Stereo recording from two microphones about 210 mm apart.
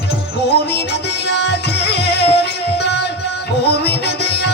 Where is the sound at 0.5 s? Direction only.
50° left (ahead or behind).